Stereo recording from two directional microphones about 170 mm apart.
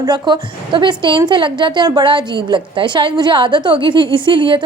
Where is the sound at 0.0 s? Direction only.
25° right (ahead or behind).